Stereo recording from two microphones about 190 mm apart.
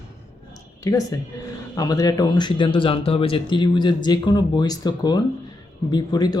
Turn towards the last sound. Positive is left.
turn(degrees=20)  # may be behind; listen again after turning